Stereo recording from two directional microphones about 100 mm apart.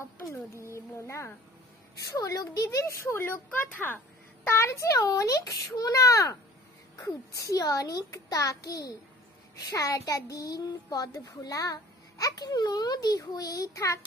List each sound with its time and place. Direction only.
0.7 s a child's voice: 30° left (ahead or behind)
4.5 s a child's voice: 30° left (ahead or behind)